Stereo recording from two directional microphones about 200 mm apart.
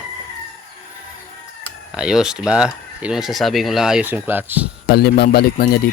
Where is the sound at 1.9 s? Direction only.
5° right (ahead or behind).